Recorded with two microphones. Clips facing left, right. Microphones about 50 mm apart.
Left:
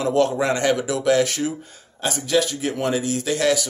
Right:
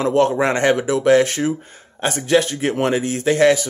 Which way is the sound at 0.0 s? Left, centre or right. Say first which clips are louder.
Right 3 dB; right.